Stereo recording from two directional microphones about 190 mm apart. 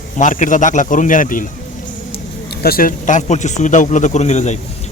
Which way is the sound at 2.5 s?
55° left (ahead or behind).